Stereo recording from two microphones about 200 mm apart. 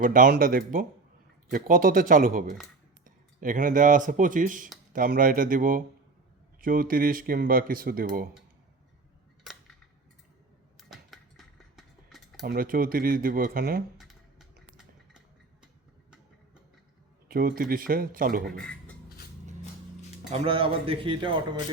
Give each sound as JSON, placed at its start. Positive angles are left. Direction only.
{"t": 0.0, "sound": "speech", "side_deg": -45}
{"t": 10.8, "sound": "a sound", "side_deg": 0}
{"t": 12.5, "sound": "speech", "side_deg": -45}
{"t": 14.0, "sound": "a sound", "side_deg": 0}
{"t": 17.2, "sound": "speech", "side_deg": -45}
{"t": 18.5, "sound": "speech", "side_deg": 5}
{"t": 20.3, "sound": "a man's voice", "side_deg": -30}